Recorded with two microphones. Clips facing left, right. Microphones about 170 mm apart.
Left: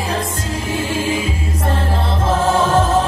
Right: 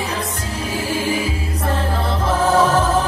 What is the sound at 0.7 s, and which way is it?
Music, 25° left (ahead or behind).